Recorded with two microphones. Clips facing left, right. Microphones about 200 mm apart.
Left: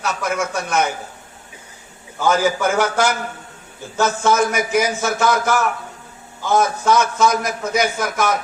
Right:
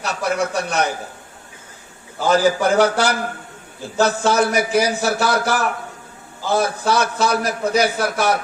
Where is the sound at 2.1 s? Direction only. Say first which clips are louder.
Right 1 dB; 35° right (ahead or behind).